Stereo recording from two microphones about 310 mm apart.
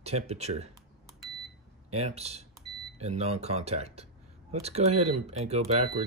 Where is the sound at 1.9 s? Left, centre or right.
Right.